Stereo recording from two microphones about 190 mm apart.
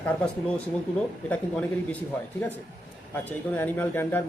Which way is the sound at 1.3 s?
10° left (ahead or behind).